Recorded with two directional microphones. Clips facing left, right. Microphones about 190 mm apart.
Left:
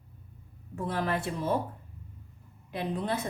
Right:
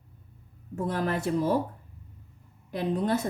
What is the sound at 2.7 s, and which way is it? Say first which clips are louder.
Speech: right 5 dB; 45° right (ahead or behind).